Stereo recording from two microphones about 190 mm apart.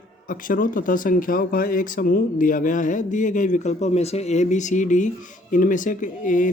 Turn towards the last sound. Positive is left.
turn(degrees=45)  # may be behind; listen again after turning